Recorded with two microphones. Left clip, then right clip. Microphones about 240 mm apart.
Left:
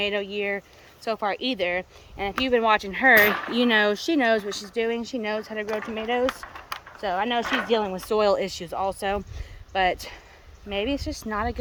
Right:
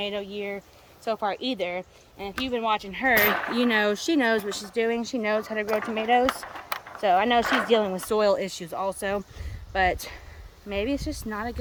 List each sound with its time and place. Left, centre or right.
0.0 s speech: centre
5.6 s speech: right
6.2 s a sound: right
7.0 s speech: centre
7.4 s speech: centre
7.7 s speech: centre